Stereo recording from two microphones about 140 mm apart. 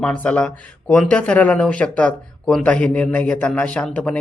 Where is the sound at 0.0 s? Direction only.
10° left (ahead or behind).